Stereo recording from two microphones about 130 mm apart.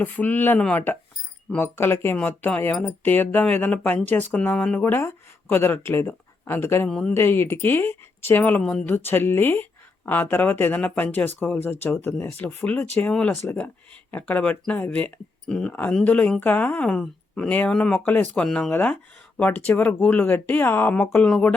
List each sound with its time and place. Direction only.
0.0 s speech: 15° left (ahead or behind)
6.8 s speech: 5° left (ahead or behind)
7.1 s speech: 20° left (ahead or behind)